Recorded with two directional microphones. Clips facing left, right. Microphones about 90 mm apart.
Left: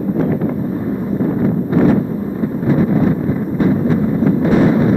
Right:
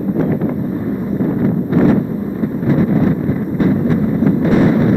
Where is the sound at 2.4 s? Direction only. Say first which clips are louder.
Even; 25° left (ahead or behind).